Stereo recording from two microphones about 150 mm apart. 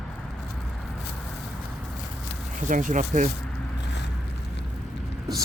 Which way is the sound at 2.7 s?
60° right (ahead or behind).